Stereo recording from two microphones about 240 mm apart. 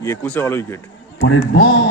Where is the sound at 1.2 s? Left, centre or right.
Left.